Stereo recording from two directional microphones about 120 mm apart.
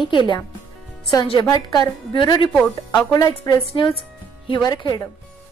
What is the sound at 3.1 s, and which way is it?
Speech, 30° left (ahead or behind).